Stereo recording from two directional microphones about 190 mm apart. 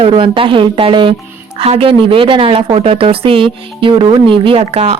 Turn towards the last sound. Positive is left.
turn(degrees=-35)  # may be behind; listen again after turning